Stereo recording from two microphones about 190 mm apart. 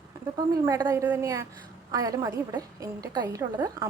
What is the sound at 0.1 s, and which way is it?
A woman's voice, 20° right (ahead or behind).